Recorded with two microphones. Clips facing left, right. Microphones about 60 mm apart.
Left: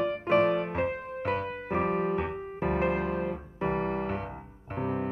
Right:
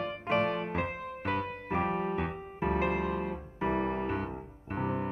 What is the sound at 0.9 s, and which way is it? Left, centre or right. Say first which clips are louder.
Music: left 3 dB; left.